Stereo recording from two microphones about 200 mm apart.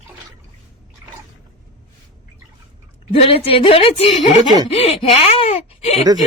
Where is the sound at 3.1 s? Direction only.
30° left (ahead or behind).